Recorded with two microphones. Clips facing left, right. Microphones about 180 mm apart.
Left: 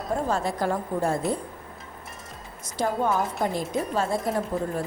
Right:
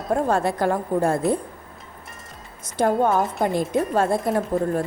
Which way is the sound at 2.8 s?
55° right (ahead or behind).